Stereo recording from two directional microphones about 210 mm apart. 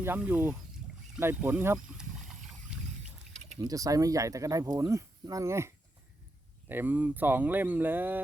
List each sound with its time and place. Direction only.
0.0 s speech: 10° right (ahead or behind)
3.6 s speech: 15° right (ahead or behind)